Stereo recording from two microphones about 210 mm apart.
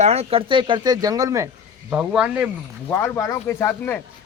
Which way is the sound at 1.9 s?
5° right (ahead or behind).